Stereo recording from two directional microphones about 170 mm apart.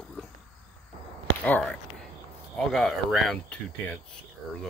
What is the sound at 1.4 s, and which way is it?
Speech, 5° left (ahead or behind).